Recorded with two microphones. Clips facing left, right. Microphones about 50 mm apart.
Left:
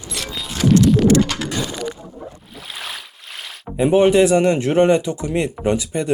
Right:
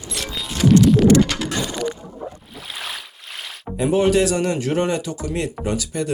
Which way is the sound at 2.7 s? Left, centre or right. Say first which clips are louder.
Even; centre.